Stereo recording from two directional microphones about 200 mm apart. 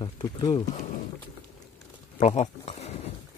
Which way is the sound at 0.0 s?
20° left (ahead or behind).